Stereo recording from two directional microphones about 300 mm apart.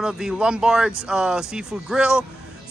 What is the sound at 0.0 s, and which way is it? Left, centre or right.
Speech, centre.